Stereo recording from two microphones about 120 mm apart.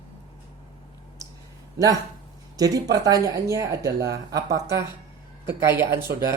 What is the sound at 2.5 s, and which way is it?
Speech, 30° right (ahead or behind).